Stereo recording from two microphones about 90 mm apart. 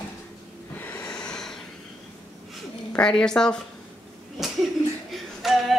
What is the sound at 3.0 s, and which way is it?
Speech, 10° left (ahead or behind).